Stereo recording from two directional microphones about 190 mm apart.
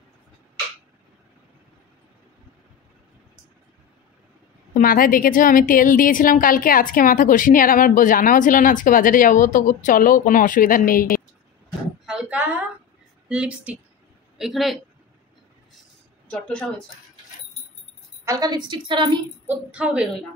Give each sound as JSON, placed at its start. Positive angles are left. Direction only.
{"t": 4.7, "sound": "a woman's voice", "side_deg": 50}
{"t": 12.1, "sound": "a sound", "side_deg": -5}
{"t": 13.3, "sound": "speech", "side_deg": -5}
{"t": 16.3, "sound": "speech", "side_deg": 5}
{"t": 18.2, "sound": "a woman's voice", "side_deg": -20}
{"t": 19.4, "sound": "a woman's voice", "side_deg": -10}